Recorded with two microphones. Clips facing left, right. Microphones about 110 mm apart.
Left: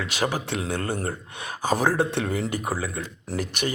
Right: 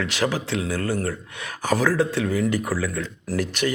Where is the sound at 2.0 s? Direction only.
55° left (ahead or behind).